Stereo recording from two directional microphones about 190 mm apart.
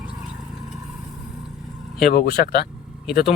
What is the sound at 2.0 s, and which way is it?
Speech, 55° left (ahead or behind).